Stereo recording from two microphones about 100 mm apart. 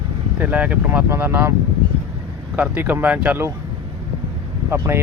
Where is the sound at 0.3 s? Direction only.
15° right (ahead or behind).